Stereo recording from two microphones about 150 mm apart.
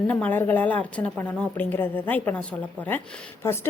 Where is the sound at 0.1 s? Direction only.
10° left (ahead or behind).